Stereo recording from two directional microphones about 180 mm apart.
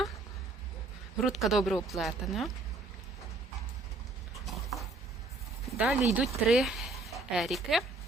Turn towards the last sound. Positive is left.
turn(degrees=0)  # may be behind; listen again after turning